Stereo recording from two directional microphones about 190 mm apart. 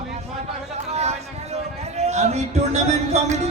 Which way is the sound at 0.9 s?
35° right (ahead or behind).